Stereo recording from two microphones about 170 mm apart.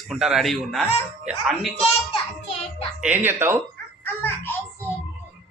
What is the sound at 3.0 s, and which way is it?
Speech, 10° right (ahead or behind).